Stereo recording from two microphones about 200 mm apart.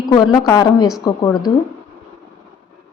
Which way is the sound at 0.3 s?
20° left (ahead or behind).